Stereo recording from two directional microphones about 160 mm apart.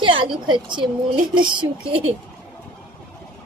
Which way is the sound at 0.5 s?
30° right (ahead or behind).